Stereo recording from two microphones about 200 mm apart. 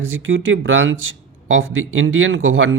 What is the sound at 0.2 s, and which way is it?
Speech, 75° right (ahead or behind).